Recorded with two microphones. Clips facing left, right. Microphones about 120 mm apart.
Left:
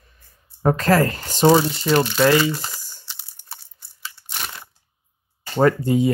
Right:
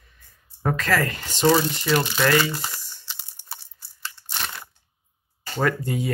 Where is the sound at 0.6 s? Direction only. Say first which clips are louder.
Left 6 dB; 35° left (ahead or behind).